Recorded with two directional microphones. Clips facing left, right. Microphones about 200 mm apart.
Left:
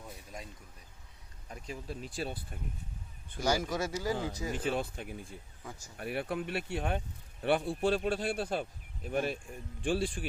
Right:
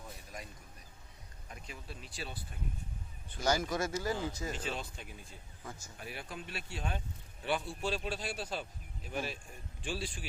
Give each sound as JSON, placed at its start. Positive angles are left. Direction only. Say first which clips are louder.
{"t": 1.5, "sound": "speech", "louder": "left 7 dB", "side_deg": 35}
{"t": 3.4, "sound": "speech", "louder": "left 1 dB", "side_deg": 10}
{"t": 4.5, "sound": "speech", "louder": "left 7 dB", "side_deg": 55}